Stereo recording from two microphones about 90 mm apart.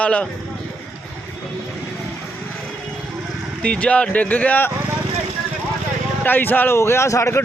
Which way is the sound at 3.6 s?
15° left (ahead or behind).